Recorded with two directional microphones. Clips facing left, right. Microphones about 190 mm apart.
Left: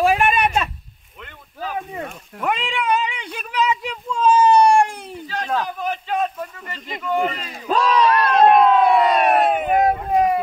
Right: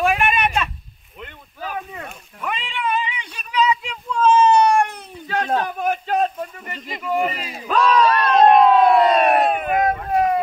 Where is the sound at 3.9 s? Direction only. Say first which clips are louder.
Right 1 dB; 25° left (ahead or behind).